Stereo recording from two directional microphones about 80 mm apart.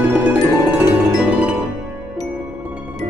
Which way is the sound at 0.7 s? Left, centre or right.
Centre.